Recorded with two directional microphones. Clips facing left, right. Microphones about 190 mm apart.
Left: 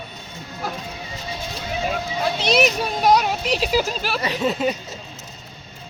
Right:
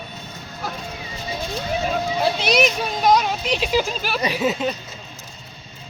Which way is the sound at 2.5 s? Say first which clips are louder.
Left 1 dB; 5° left (ahead or behind).